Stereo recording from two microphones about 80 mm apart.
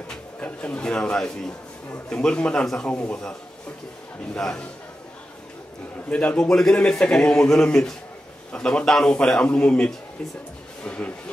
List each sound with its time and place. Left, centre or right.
0.1 s speech: centre
4.4 s speech: centre
6.0 s speech: centre